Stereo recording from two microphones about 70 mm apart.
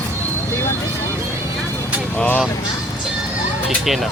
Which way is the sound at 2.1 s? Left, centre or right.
Left.